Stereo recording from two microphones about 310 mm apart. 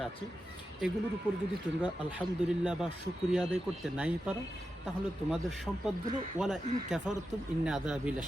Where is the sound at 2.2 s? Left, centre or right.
Centre.